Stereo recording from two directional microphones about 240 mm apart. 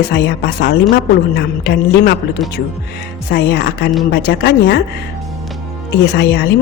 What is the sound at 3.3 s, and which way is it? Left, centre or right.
A woman's voice, left.